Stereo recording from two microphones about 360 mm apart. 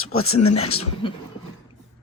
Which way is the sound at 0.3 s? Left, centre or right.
Left.